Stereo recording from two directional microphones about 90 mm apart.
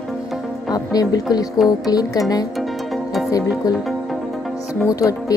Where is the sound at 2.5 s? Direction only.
Centre (ahead or behind).